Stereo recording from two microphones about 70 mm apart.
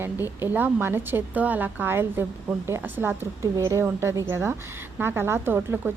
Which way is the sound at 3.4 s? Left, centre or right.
Right.